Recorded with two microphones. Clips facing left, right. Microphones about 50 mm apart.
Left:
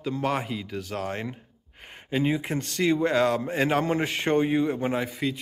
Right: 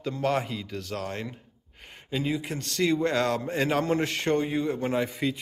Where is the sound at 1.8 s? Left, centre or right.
Centre.